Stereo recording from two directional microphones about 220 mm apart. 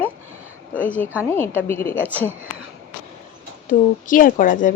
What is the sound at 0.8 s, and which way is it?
A woman's voice, 5° left (ahead or behind).